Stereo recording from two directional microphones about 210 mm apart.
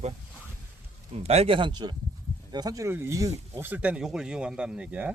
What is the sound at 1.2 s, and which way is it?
Speech, 30° right (ahead or behind).